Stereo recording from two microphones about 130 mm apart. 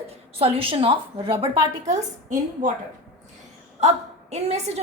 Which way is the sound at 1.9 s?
65° right (ahead or behind).